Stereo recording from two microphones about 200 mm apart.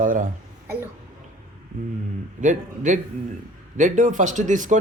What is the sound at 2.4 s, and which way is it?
Speech, 40° right (ahead or behind).